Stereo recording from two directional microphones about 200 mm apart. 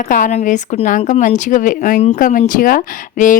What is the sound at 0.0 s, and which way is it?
Speech, 40° left (ahead or behind).